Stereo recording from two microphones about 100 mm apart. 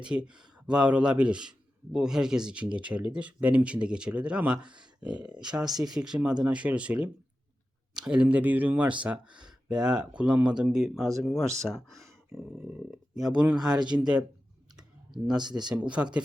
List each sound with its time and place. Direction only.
0.0 s a man's voice: 10° right (ahead or behind)
13.7 s speech: 50° right (ahead or behind)
14.0 s a man's voice: 10° right (ahead or behind)
14.8 s clicking: 5° right (ahead or behind)
15.5 s a man's voice: 10° right (ahead or behind)